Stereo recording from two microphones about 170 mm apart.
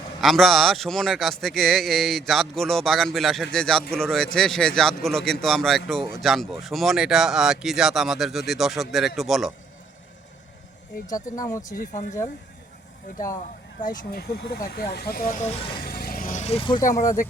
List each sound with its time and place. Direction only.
0.2 s speech: centre (ahead or behind)
11.0 s speech: 20° left (ahead or behind)
11.7 s speech: 50° left (ahead or behind)
14.0 s speech: 65° left (ahead or behind)
15.3 s speech: 40° left (ahead or behind)
15.8 s vehicle: 65° left (ahead or behind); by 17.0 s 20° left (ahead or behind)
17.0 s speech: 50° left (ahead or behind)